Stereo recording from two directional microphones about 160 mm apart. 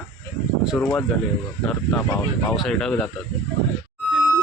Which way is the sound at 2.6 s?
5° left (ahead or behind).